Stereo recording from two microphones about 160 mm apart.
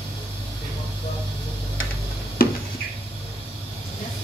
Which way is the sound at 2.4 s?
70° left (ahead or behind).